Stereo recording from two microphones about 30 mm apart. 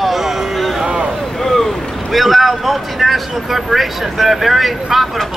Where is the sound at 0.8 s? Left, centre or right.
Right.